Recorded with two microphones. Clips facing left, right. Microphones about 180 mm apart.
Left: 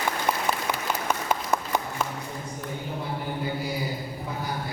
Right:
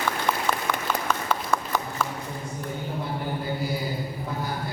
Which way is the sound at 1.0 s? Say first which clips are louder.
Even; 20° left (ahead or behind).